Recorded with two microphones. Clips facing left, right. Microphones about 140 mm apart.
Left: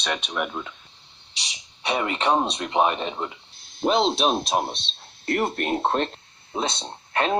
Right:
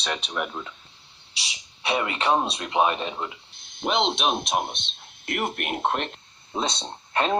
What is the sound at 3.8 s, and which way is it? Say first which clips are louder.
Speech: left 4 dB; 35° left (ahead or behind).